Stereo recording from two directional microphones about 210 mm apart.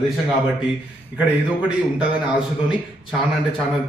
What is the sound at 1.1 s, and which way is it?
Speech, 5° right (ahead or behind).